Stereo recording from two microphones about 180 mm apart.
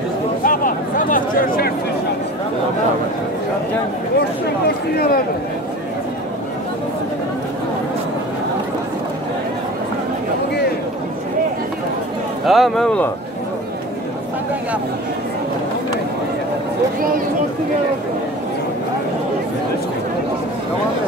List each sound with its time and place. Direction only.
0.4 s a sound: 50° left (ahead or behind)
4.6 s speech: 60° left (ahead or behind)
12.4 s speech: centre (ahead or behind)